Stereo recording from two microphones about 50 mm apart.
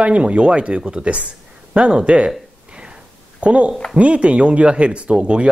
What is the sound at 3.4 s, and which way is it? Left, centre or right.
Speech, right.